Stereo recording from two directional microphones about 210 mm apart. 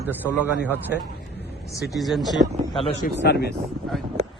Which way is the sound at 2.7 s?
25° left (ahead or behind).